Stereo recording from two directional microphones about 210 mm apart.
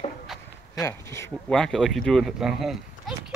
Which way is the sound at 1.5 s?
5° left (ahead or behind).